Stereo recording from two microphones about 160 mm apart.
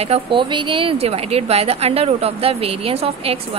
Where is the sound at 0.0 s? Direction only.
35° right (ahead or behind).